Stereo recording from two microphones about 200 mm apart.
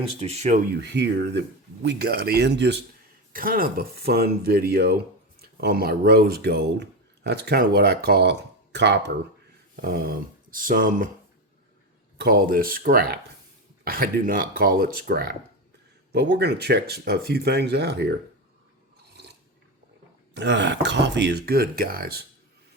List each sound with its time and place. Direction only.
0.2 s speech: 35° right (ahead or behind)
0.8 s speech: 60° right (ahead or behind)
3.3 s speech: 45° right (ahead or behind)
12.1 s speech: 50° right (ahead or behind)
20.3 s speech: 60° right (ahead or behind)